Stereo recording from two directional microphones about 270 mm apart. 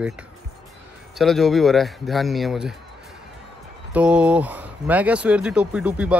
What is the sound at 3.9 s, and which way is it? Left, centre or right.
Speech, centre.